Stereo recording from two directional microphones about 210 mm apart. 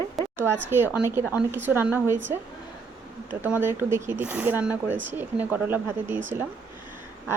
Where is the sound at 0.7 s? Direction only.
10° right (ahead or behind).